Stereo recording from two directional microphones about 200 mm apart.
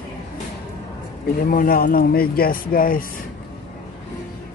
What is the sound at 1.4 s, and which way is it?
Speech, 45° left (ahead or behind).